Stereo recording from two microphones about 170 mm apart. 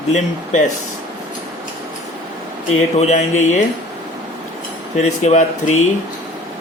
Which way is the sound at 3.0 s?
40° left (ahead or behind).